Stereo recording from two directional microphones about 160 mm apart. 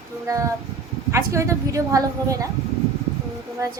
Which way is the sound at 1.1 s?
20° right (ahead or behind).